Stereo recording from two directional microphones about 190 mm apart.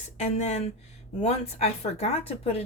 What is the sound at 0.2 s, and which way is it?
Speech, 35° left (ahead or behind).